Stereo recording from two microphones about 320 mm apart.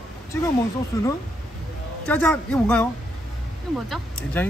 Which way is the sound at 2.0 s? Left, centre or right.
Centre.